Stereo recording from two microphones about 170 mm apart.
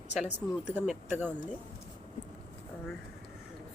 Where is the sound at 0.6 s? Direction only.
5° right (ahead or behind).